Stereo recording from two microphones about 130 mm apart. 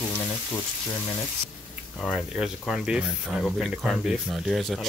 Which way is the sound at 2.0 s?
5° right (ahead or behind).